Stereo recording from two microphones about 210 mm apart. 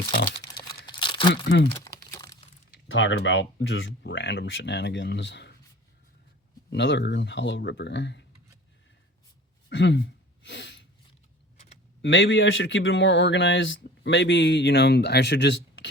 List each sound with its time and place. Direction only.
0.9 s crumpling: 20° left (ahead or behind)
2.6 s speech: 60° left (ahead or behind)
6.7 s speech: 60° left (ahead or behind)
9.6 s speech: 60° left (ahead or behind)
10.4 s a sound: 60° left (ahead or behind)
12.0 s speech: 60° left (ahead or behind)